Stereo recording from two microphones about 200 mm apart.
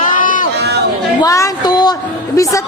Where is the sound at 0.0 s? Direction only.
40° left (ahead or behind).